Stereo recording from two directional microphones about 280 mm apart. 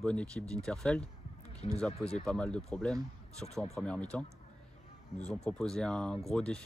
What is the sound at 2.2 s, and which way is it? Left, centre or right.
Speech, centre.